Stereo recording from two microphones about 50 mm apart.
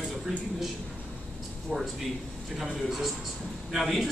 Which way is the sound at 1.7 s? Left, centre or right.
Centre.